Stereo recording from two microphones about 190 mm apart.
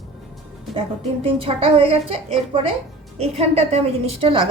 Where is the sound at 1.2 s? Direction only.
30° right (ahead or behind).